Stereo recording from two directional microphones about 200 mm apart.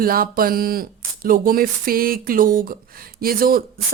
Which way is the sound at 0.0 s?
45° right (ahead or behind).